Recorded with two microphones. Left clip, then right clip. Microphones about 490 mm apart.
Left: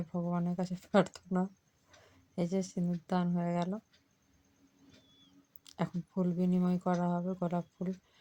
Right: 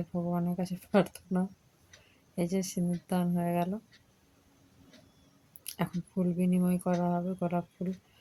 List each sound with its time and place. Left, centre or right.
0.1 s speech: right
5.6 s speech: right